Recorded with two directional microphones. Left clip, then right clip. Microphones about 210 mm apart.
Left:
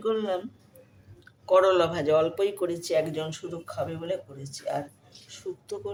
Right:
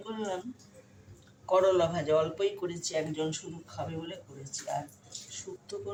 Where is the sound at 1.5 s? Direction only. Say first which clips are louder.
Left 4 dB; 55° left (ahead or behind).